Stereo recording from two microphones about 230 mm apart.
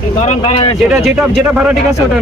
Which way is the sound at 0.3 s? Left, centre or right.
Left.